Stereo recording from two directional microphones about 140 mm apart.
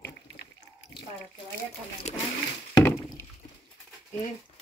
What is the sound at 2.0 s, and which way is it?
Pigeon, 55° left (ahead or behind).